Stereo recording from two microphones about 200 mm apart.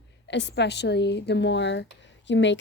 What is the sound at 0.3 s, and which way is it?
Speech, 60° left (ahead or behind).